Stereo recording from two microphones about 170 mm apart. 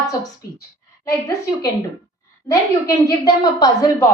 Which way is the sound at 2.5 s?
20° left (ahead or behind).